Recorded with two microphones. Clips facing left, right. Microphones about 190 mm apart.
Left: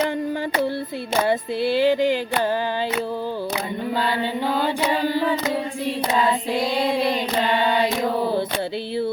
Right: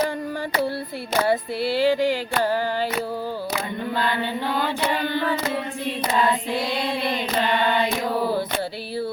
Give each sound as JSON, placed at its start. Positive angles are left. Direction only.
{"t": 1.3, "sound": "music", "side_deg": 20}